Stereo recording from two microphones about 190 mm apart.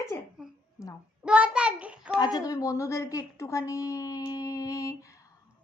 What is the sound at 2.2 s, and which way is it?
A woman's voice, 20° left (ahead or behind).